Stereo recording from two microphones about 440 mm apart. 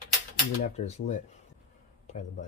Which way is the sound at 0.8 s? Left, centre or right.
Centre.